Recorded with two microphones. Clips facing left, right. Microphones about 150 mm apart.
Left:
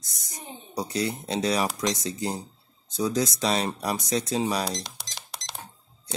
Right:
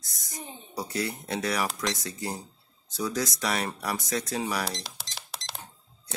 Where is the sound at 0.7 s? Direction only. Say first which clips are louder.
Left 3 dB; 20° left (ahead or behind).